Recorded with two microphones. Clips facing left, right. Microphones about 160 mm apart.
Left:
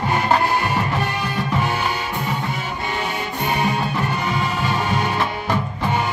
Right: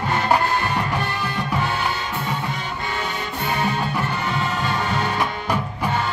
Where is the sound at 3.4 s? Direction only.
15° left (ahead or behind).